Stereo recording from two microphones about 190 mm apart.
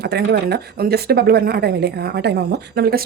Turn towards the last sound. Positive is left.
turn(degrees=-55)  # may be behind; listen again after turning